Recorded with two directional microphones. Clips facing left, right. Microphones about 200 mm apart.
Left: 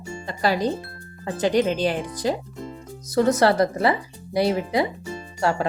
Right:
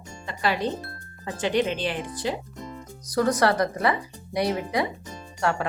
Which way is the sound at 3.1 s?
25° left (ahead or behind).